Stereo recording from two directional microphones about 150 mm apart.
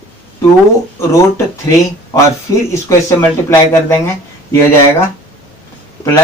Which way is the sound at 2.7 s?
20° left (ahead or behind).